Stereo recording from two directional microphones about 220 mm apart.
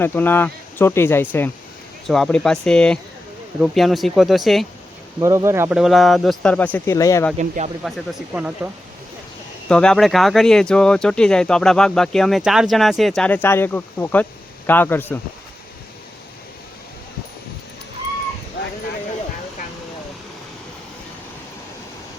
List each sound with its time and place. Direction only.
0.0 s speech: 10° left (ahead or behind)
5.2 s speech: 15° right (ahead or behind); by 7.3 s 15° left (ahead or behind)
7.3 s speech: 30° right (ahead or behind)
7.9 s speech: centre (ahead or behind)
9.6 s speech: 5° left (ahead or behind)